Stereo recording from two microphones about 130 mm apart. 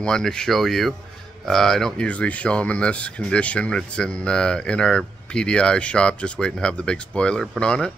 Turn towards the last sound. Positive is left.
turn(degrees=0)  # may be behind; listen again after turning